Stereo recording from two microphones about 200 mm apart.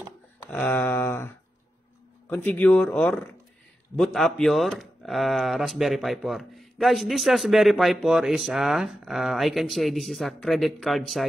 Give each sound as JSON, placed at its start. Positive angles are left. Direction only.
{"t": 0.5, "sound": "speech", "side_deg": 10}